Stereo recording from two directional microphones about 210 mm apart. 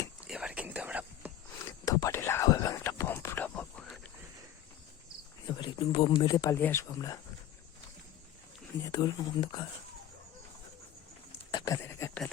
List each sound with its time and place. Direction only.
0.3 s whispering: 5° right (ahead or behind)
1.8 s whispering: 15° left (ahead or behind)
5.5 s speech: 25° left (ahead or behind)
8.8 s speech: 20° left (ahead or behind)
11.5 s a sound: 15° left (ahead or behind)